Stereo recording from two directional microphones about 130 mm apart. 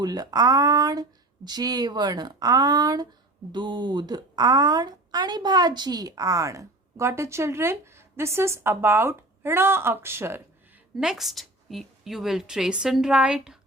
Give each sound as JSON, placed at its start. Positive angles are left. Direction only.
{"t": 0.0, "sound": "speech", "side_deg": -30}
{"t": 10.9, "sound": "a woman's voice", "side_deg": -5}